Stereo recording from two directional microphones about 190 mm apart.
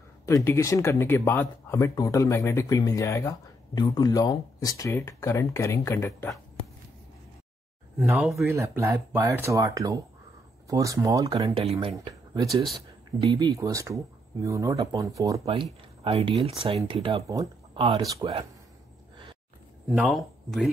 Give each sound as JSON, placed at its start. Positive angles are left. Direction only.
{"t": 0.3, "sound": "speech", "side_deg": 15}
{"t": 8.2, "sound": "speech", "side_deg": 0}
{"t": 8.5, "sound": "speech", "side_deg": -15}
{"t": 11.9, "sound": "speech", "side_deg": -20}
{"t": 15.4, "sound": "speech", "side_deg": -30}
{"t": 17.3, "sound": "speech", "side_deg": -15}
{"t": 19.9, "sound": "speech", "side_deg": 0}